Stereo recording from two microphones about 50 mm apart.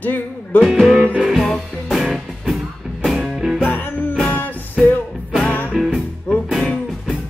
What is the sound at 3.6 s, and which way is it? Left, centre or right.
Music, left.